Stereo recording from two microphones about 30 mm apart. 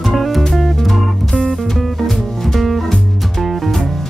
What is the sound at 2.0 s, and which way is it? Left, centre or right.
Music, centre.